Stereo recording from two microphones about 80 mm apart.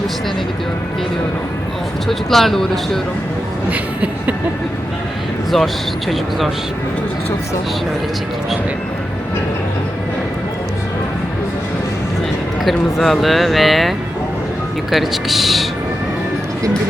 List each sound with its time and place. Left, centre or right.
2.0 s speech: centre
3.7 s speech: centre
12.6 s speech: centre